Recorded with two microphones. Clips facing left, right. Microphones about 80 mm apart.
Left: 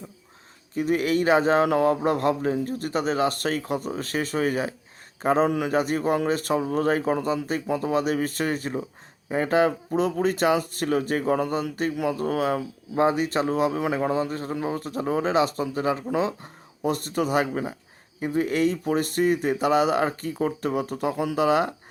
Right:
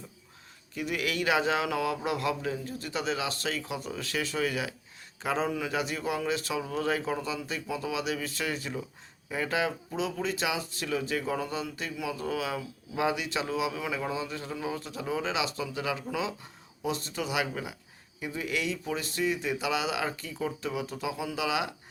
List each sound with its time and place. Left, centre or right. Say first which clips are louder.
0.7 s a man's voice: left 9 dB; left
5.5 s speech: left 8 dB; left